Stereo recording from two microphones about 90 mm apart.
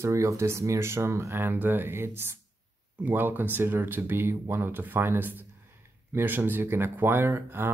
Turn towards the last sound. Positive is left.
turn(degrees=-25)  # may be behind; listen again after turning